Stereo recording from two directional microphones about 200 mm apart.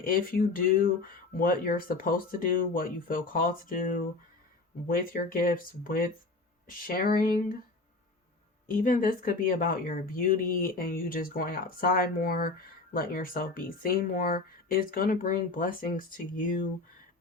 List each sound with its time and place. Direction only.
0.0 s speech: 45° left (ahead or behind)
8.6 s speech: 45° left (ahead or behind)